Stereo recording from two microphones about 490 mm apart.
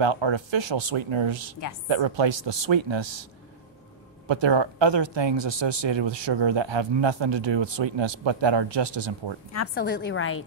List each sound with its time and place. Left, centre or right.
0.0 s speech: right
4.3 s speech: right
9.8 s a woman's voice: centre